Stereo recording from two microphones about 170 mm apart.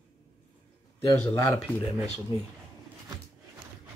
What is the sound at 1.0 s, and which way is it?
Speech, 15° left (ahead or behind).